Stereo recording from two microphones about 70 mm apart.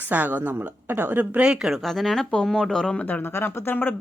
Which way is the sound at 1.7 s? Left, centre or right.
Centre.